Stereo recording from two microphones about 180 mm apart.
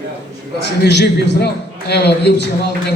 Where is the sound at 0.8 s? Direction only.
70° left (ahead or behind).